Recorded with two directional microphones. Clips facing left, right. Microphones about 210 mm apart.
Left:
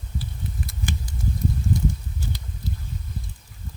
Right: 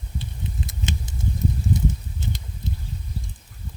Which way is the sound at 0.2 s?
20° right (ahead or behind).